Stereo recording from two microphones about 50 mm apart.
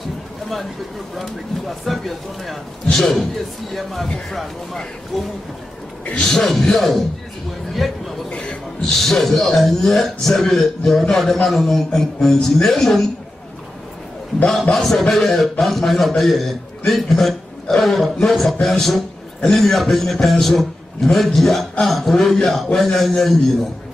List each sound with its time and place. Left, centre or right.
1.1 s a man's voice: centre
5.1 s a man's voice: centre
8.3 s a man's voice: centre
14.5 s a man's voice: centre